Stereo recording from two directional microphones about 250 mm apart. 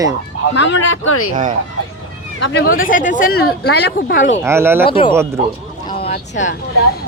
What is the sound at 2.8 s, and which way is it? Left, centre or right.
Speech, left.